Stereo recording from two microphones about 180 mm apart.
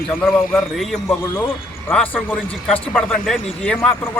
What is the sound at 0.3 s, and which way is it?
Speech, centre (ahead or behind).